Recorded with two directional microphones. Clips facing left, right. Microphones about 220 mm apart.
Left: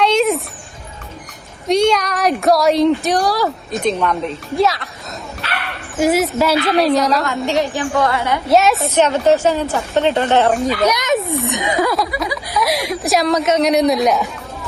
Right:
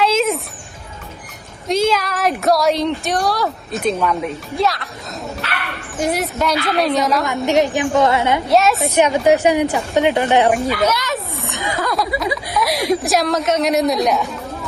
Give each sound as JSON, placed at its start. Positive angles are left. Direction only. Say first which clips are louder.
{"t": 0.0, "sound": "a sound", "louder": "left 2 dB", "side_deg": 0}
{"t": 1.6, "sound": "a woman's voice", "louder": "left 3 dB", "side_deg": 0}
{"t": 6.0, "sound": "a woman's voice", "louder": "left 5 dB", "side_deg": 0}
{"t": 7.3, "sound": "a woman's voice", "louder": "right 2 dB", "side_deg": -20}
{"t": 8.4, "sound": "a woman's voice", "louder": "left 4 dB", "side_deg": 0}
{"t": 9.0, "sound": "a woman's voice", "louder": "even", "side_deg": -10}
{"t": 10.8, "sound": "speech", "louder": "left 4 dB", "side_deg": 20}
{"t": 12.1, "sound": "speech", "louder": "right 1 dB", "side_deg": -25}
{"t": 12.5, "sound": "a woman's voice", "louder": "right 1 dB", "side_deg": 0}